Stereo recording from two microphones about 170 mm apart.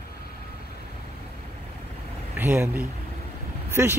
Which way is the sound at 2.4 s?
10° right (ahead or behind).